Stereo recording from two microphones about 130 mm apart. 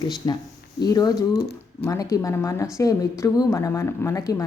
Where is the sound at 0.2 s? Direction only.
30° left (ahead or behind).